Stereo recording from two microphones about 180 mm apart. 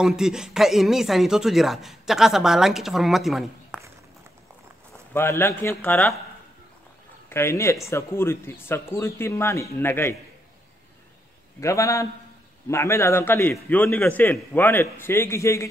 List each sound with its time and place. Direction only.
0.0 s speech: 5° right (ahead or behind)
5.1 s a man's voice: 15° left (ahead or behind)
7.2 s a man's voice: 15° left (ahead or behind)
11.6 s a man's voice: 15° left (ahead or behind)